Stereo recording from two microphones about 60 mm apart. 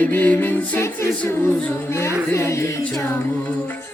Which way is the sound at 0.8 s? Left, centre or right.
Left.